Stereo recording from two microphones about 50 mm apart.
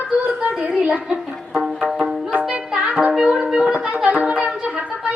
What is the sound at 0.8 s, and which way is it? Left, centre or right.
Speech, right.